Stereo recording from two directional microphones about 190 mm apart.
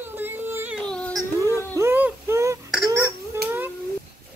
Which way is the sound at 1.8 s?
10° right (ahead or behind).